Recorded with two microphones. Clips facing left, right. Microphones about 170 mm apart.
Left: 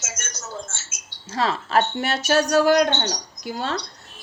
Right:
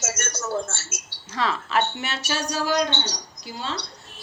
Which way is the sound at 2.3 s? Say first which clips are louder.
Left 8 dB; 60° left (ahead or behind).